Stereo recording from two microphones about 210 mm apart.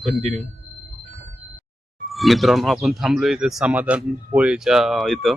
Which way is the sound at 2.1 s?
Centre (ahead or behind).